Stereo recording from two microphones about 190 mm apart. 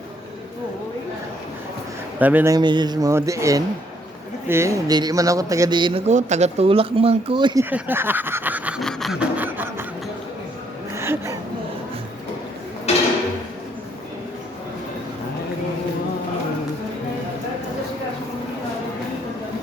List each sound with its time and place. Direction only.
2.1 s snicker: 10° right (ahead or behind)
6.1 s speech: 40° right (ahead or behind)
7.6 s snicker: 10° right (ahead or behind)
10.9 s a sound: 15° right (ahead or behind)